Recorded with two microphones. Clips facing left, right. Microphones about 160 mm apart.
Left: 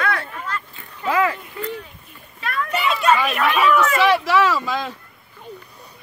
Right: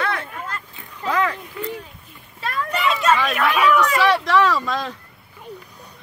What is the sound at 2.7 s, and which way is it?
Speech, centre (ahead or behind).